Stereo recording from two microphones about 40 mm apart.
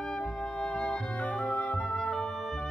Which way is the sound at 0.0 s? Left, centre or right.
Centre.